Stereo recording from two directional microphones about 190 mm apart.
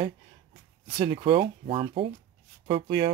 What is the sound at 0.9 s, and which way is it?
Speech, 20° right (ahead or behind).